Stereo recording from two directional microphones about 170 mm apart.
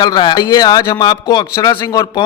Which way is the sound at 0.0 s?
25° left (ahead or behind).